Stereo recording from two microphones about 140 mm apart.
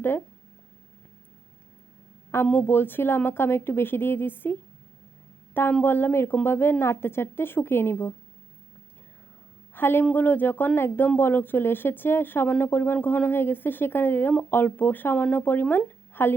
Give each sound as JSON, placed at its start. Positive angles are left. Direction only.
{"t": 2.3, "sound": "speech", "side_deg": 15}
{"t": 5.5, "sound": "speech", "side_deg": 15}
{"t": 9.7, "sound": "speech", "side_deg": 15}